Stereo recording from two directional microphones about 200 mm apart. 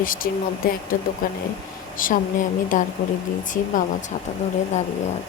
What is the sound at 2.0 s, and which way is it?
Speech, 40° left (ahead or behind).